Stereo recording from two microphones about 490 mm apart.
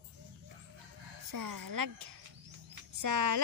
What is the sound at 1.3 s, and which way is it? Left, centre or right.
Speech, right.